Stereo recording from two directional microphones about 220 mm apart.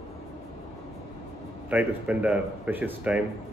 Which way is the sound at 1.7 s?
5° right (ahead or behind).